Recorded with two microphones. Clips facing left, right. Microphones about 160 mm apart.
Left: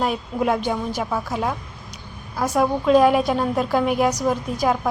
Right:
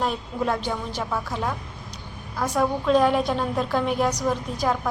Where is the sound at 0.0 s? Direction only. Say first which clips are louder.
Left 3 dB; 10° left (ahead or behind).